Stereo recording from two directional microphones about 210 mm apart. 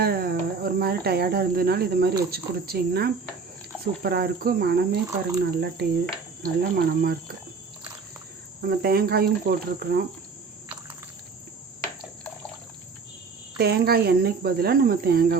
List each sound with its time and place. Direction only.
0.0 s cricket: 45° right (ahead or behind)
2.3 s speech: 50° right (ahead or behind)
8.6 s speech: 45° right (ahead or behind)
13.6 s speech: 50° right (ahead or behind)